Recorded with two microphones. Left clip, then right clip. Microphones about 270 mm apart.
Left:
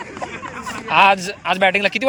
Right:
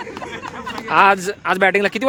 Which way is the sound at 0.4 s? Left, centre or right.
Centre.